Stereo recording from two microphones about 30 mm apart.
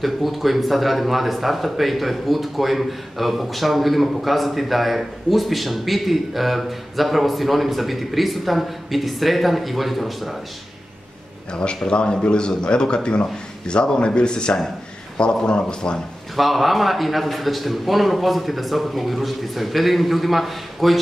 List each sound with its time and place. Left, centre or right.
0.0 s speech: centre
11.5 s speech: left
16.3 s speech: centre